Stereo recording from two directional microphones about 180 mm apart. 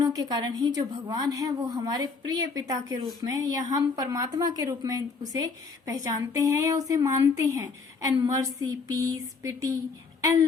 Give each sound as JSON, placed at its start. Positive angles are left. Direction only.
{"t": 0.0, "sound": "a woman's voice", "side_deg": -20}